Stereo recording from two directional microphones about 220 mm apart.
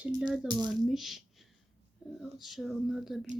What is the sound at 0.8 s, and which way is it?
Speech, centre (ahead or behind).